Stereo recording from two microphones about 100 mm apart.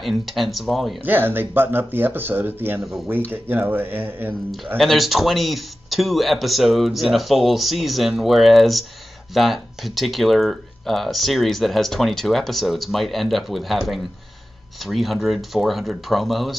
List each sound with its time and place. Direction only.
0.0 s speech: centre (ahead or behind)
1.0 s speech: 20° right (ahead or behind)
4.7 s speech: centre (ahead or behind)